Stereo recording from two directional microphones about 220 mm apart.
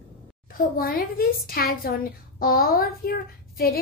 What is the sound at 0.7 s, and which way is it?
A woman's voice, 40° left (ahead or behind).